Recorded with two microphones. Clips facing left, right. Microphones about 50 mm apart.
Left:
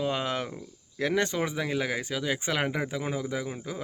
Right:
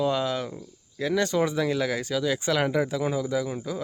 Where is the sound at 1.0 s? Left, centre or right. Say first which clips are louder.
Right 1 dB; left.